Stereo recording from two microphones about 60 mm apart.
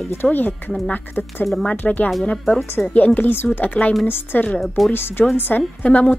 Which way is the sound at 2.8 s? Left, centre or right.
Centre.